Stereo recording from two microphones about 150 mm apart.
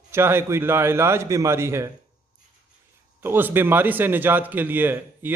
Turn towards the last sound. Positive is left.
turn(degrees=-15)  # may be behind; listen again after turning